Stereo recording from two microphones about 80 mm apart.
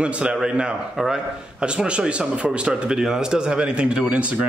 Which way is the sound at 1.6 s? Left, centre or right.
Centre.